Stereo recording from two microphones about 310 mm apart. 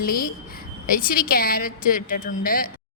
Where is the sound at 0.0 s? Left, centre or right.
Left.